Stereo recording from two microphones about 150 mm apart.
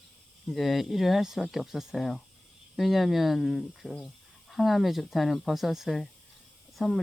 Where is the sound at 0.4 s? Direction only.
Centre (ahead or behind).